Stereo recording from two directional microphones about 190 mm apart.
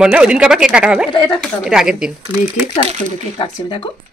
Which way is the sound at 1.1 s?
25° left (ahead or behind).